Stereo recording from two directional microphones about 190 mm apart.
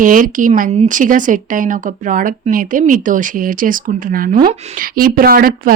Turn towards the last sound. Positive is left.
turn(degrees=-50)  # may be behind; listen again after turning